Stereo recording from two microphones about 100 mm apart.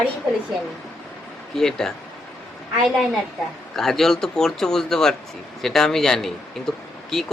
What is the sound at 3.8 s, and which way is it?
Speech, 5° left (ahead or behind).